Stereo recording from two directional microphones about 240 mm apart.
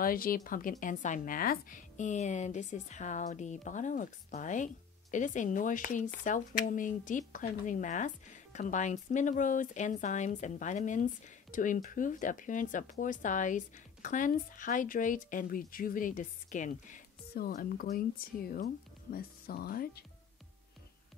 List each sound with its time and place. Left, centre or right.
0.0 s speech: left